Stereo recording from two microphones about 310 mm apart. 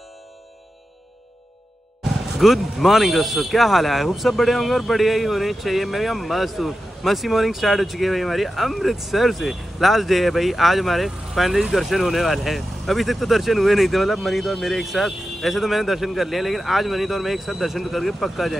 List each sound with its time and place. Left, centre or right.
2.3 s speech: centre